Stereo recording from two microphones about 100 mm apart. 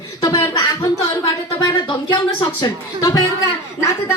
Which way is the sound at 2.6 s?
40° left (ahead or behind).